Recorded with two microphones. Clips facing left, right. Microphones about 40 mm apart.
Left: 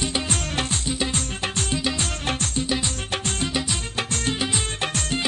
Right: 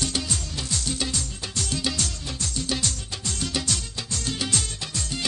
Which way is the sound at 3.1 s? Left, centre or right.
Left.